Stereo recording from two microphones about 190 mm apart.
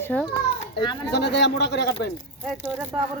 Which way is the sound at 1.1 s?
60° left (ahead or behind).